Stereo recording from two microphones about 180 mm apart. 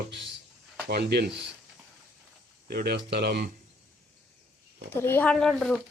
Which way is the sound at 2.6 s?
60° right (ahead or behind).